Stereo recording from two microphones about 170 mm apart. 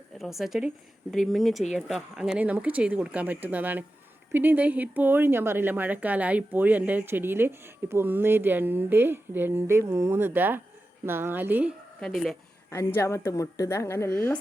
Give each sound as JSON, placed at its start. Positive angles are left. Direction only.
{"t": 0.2, "sound": "a woman's voice", "side_deg": 0}
{"t": 11.9, "sound": "a woman's voice", "side_deg": 0}
{"t": 12.7, "sound": "a woman's voice", "side_deg": 15}